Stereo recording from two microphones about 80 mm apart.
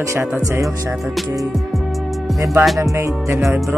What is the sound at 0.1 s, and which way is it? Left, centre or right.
Music, right.